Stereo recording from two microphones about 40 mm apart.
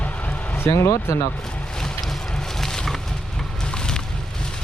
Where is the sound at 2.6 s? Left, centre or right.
Centre.